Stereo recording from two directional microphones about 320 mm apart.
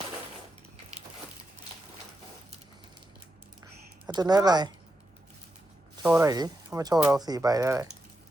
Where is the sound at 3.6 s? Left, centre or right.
Centre.